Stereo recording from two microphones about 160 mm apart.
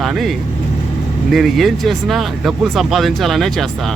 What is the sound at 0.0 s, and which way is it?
Speech, centre (ahead or behind).